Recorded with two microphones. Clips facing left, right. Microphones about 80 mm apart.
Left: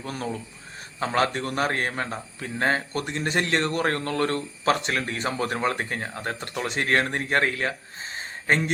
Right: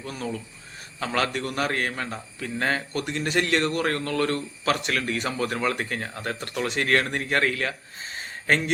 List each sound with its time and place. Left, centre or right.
0.0 s a man's voice: left
0.9 s a man's voice: left